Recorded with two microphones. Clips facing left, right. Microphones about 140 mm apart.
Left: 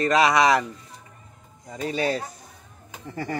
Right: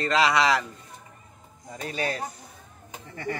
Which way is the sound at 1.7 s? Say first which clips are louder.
Left 5 dB; 25° left (ahead or behind).